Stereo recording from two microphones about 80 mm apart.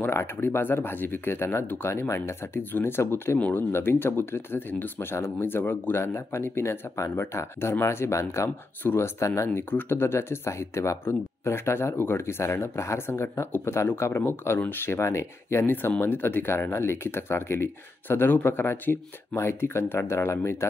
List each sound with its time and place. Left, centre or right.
0.0 s speech: left
3.3 s speech: centre
3.7 s speech: left